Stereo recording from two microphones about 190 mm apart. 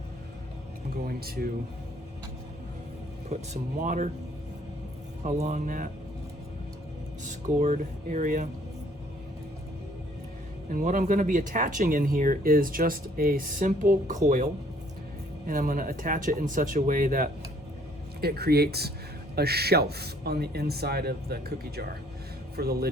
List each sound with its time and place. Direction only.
1.0 s speech: 55° right (ahead or behind)
3.2 s speech: 40° right (ahead or behind)
5.2 s speech: 40° right (ahead or behind)
7.3 s speech: 40° right (ahead or behind)
10.7 s speech: 45° right (ahead or behind)
15.4 s a man's voice: 45° right (ahead or behind)